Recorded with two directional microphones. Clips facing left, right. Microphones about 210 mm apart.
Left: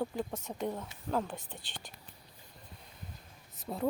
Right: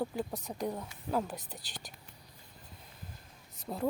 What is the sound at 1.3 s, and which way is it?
Speech, 40° right (ahead or behind).